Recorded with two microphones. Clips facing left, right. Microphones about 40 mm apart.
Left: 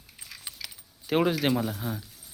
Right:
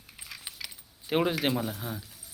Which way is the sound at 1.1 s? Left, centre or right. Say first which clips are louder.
Left 2 dB; right.